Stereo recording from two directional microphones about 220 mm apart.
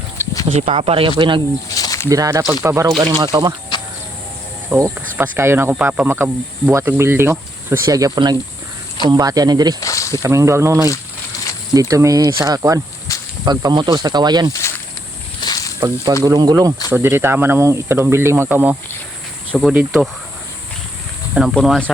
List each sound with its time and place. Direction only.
0.2 s a sound: 10° left (ahead or behind)
0.6 s speech: 25° right (ahead or behind)
1.7 s snake: 15° left (ahead or behind)
2.0 s speech: 15° right (ahead or behind)
3.7 s vehicle: 20° left (ahead or behind)
4.7 s speech: 5° right (ahead or behind)
9.8 s snake: 15° left (ahead or behind)
10.2 s speech: 15° right (ahead or behind)
15.4 s snake: 15° left (ahead or behind)
16.2 s speech: 15° right (ahead or behind)
21.3 s speech: centre (ahead or behind)